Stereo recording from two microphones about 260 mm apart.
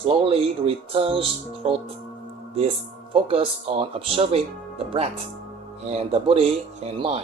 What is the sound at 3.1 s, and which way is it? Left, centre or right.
A man's voice, right.